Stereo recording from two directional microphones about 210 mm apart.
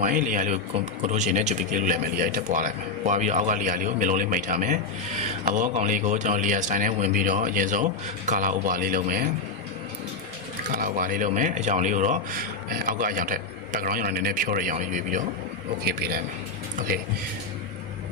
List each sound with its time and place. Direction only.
0.0 s a man's voice: 40° right (ahead or behind)
10.7 s a man's voice: 40° right (ahead or behind)
15.8 s a man's voice: 50° right (ahead or behind)